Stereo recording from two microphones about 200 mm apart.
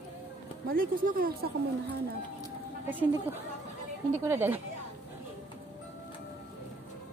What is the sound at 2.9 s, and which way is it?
A woman's voice, 10° right (ahead or behind).